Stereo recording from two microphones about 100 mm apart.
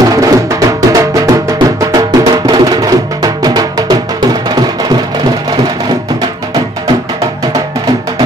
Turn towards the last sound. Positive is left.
turn(degrees=-40)  # may be behind; listen again after turning